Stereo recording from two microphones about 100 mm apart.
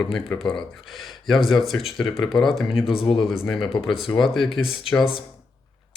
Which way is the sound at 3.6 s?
60° left (ahead or behind).